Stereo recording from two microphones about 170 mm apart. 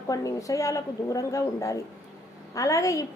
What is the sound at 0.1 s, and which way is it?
A woman's voice, 20° left (ahead or behind).